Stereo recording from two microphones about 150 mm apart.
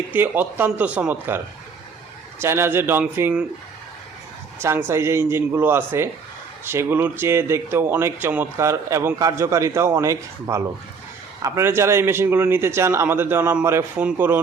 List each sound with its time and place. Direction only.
0.1 s speech: 15° right (ahead or behind)
2.4 s speech: 15° right (ahead or behind)
4.6 s speech: 15° right (ahead or behind)